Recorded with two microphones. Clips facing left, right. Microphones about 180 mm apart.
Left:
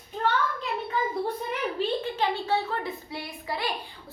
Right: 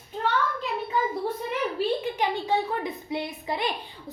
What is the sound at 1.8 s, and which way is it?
A woman's voice, 15° right (ahead or behind).